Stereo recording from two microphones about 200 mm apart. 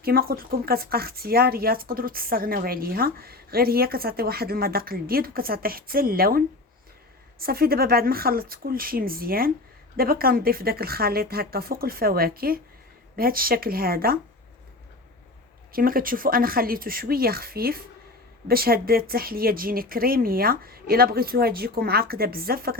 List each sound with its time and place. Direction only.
0.0 s speech: 50° right (ahead or behind)
15.7 s speech: 45° right (ahead or behind)